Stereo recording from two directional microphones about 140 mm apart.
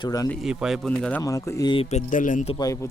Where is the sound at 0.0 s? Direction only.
25° left (ahead or behind).